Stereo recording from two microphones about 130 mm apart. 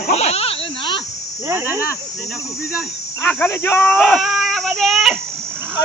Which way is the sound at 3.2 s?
15° left (ahead or behind).